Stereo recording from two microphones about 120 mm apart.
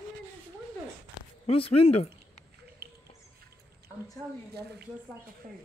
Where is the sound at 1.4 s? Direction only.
55° left (ahead or behind).